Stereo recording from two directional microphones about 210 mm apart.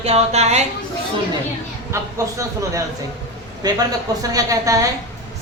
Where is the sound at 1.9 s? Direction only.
15° right (ahead or behind).